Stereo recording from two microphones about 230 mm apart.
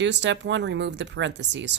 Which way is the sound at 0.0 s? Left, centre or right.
Right.